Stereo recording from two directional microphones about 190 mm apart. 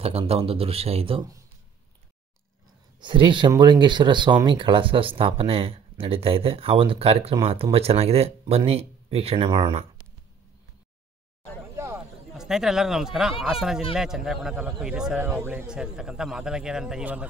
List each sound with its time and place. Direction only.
0.0 s speech: 30° right (ahead or behind)
3.0 s speech: 25° right (ahead or behind)
11.7 s a sound: 15° right (ahead or behind)
12.3 s a man's voice: centre (ahead or behind)